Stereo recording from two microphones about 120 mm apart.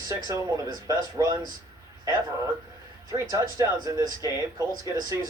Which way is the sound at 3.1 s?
30° right (ahead or behind).